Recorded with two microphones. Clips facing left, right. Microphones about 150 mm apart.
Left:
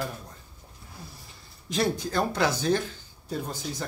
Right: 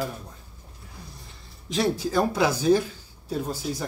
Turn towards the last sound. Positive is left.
turn(degrees=-5)  # may be behind; listen again after turning